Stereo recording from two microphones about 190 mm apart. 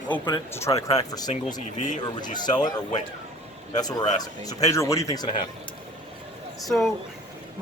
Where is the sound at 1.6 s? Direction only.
40° left (ahead or behind).